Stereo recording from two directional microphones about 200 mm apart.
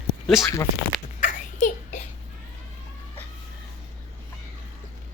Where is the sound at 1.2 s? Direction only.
40° left (ahead or behind).